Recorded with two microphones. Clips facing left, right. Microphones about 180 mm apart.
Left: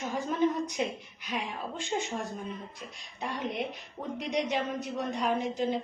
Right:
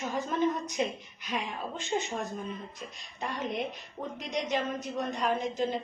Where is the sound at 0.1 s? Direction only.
10° left (ahead or behind).